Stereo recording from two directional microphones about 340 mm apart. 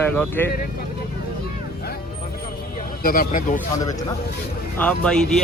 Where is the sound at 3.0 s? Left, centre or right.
Left.